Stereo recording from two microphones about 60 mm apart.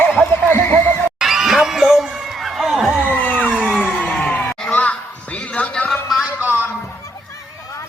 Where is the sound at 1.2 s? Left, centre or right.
Centre.